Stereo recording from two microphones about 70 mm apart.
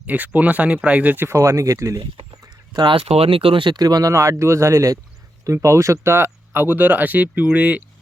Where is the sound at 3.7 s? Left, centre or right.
Right.